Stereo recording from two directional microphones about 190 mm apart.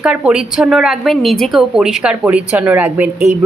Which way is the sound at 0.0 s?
5° right (ahead or behind).